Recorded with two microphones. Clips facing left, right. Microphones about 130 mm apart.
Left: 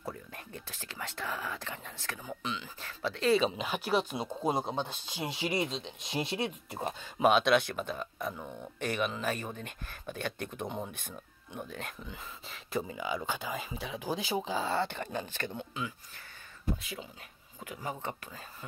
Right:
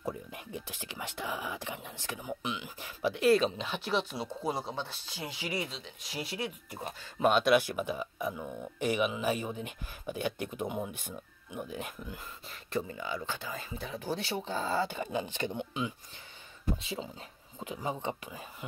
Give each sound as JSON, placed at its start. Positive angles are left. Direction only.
{"t": 0.0, "sound": "speech", "side_deg": -15}
{"t": 3.3, "sound": "speech", "side_deg": 5}
{"t": 7.2, "sound": "speech", "side_deg": 0}
{"t": 12.4, "sound": "speech", "side_deg": 5}
{"t": 14.1, "sound": "speech", "side_deg": 90}
{"t": 14.6, "sound": "speech", "side_deg": 0}